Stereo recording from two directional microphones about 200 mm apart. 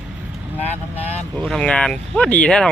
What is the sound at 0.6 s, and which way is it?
Speech, 30° left (ahead or behind).